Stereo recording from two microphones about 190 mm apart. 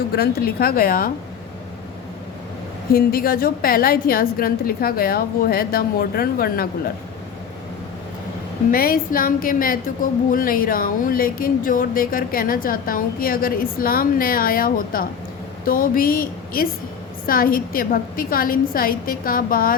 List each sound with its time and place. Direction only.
0.2 s a woman's voice: 55° left (ahead or behind)
2.9 s a woman's voice: 50° left (ahead or behind)
8.7 s a woman's voice: 50° left (ahead or behind)